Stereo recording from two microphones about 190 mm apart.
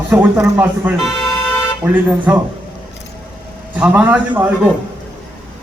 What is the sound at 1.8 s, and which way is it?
Speech, 10° right (ahead or behind).